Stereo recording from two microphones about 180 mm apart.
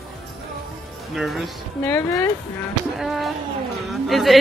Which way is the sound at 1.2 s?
Centre (ahead or behind).